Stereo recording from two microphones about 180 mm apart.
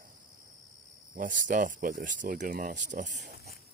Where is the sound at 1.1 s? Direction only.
50° right (ahead or behind).